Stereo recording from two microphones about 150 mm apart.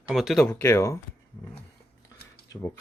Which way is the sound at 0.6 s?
20° left (ahead or behind).